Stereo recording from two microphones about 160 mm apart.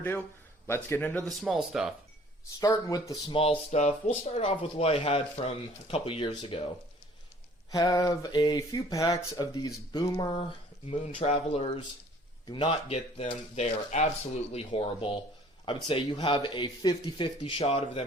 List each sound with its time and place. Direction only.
0.7 s speech: 15° left (ahead or behind)
1.4 s speech: centre (ahead or behind)
2.6 s speech: 20° left (ahead or behind)
3.3 s speech: 35° left (ahead or behind)
7.7 s speech: 25° left (ahead or behind)
10.8 s speech: 40° left (ahead or behind)
12.6 s speech: 40° left (ahead or behind)